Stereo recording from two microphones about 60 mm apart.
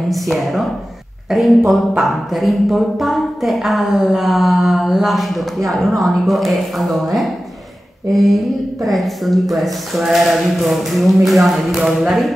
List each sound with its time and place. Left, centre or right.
0.1 s speech: centre